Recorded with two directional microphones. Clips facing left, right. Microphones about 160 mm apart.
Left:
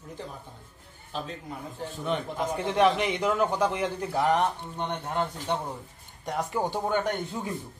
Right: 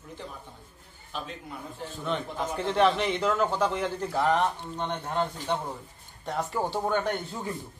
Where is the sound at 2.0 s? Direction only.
10° left (ahead or behind).